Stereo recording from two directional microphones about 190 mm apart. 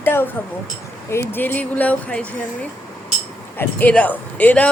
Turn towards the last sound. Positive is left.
turn(degrees=10)  # may be behind; listen again after turning